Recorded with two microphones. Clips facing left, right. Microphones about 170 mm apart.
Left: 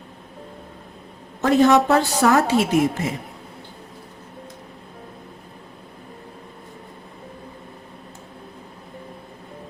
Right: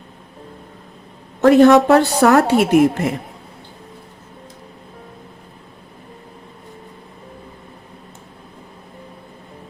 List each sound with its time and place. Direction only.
1.4 s a woman's voice: 65° right (ahead or behind)